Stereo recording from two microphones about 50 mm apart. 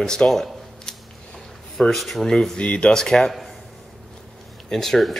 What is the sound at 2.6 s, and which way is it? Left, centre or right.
Speech, left.